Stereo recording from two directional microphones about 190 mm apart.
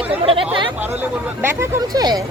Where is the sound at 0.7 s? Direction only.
10° right (ahead or behind).